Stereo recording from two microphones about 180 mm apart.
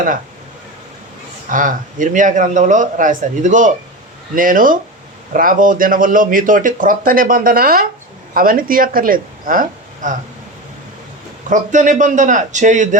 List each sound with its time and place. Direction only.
1.5 s speech: 45° right (ahead or behind)
11.4 s speech: 45° right (ahead or behind)